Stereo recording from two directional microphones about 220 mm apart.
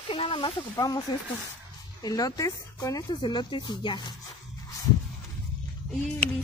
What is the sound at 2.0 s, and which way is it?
Speech, 15° left (ahead or behind).